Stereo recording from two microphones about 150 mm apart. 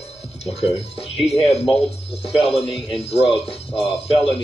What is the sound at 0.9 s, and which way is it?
Music, 40° left (ahead or behind).